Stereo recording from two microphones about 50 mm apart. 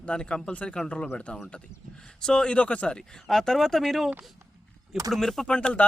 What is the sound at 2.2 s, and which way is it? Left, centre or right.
Speech, centre.